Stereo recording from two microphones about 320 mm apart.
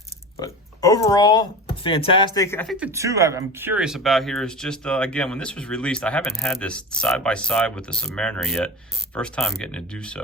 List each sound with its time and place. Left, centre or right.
0.3 s speech: centre